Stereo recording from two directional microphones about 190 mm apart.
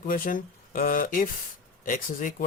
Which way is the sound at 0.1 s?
45° left (ahead or behind).